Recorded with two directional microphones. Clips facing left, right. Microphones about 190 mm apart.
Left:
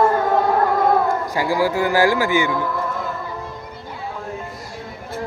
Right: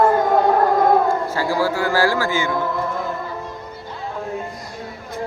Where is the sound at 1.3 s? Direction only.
15° left (ahead or behind).